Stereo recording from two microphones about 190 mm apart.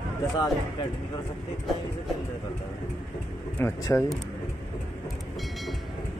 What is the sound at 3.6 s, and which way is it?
Speech, 15° left (ahead or behind).